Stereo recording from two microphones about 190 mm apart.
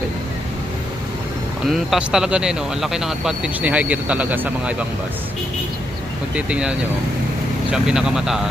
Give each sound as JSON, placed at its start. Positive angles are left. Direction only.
{"t": 1.7, "sound": "speech", "side_deg": 0}
{"t": 6.3, "sound": "speech", "side_deg": -5}